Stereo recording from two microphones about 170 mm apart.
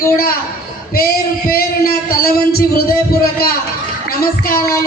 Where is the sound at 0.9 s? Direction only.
65° left (ahead or behind).